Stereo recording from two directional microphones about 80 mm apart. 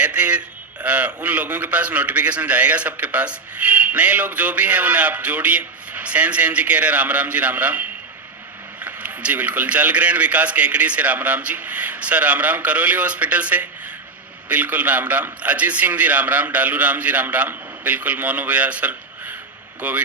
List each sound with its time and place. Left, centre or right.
0.0 s a man's voice: centre